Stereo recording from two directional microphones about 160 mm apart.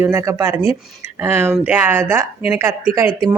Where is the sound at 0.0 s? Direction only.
15° right (ahead or behind).